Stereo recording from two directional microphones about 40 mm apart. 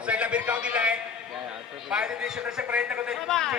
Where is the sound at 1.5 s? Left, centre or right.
Centre.